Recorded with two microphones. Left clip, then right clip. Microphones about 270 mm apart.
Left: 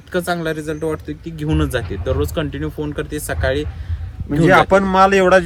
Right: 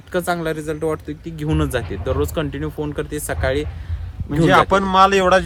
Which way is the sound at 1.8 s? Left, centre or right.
Right.